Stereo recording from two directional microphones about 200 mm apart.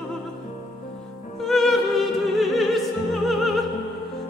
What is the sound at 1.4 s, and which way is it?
Music, centre (ahead or behind).